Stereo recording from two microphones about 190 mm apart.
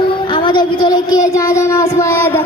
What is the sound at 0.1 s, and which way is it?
Child singing, 25° left (ahead or behind).